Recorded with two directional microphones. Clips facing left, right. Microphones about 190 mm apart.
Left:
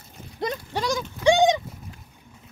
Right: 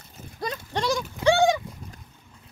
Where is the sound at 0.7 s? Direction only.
Centre (ahead or behind).